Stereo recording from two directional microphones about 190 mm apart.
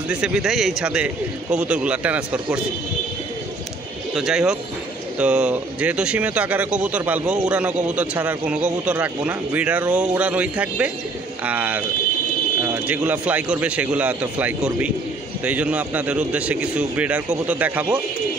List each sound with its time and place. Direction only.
0.1 s a man's voice: 5° right (ahead or behind)
4.1 s a man's voice: 5° right (ahead or behind)